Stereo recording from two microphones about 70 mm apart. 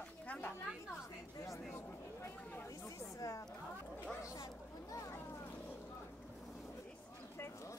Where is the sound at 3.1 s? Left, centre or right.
Left.